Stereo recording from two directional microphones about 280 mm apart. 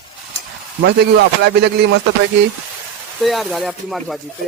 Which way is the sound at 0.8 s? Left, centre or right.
Right.